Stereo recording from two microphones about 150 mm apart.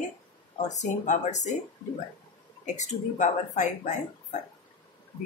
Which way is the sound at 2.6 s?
50° left (ahead or behind).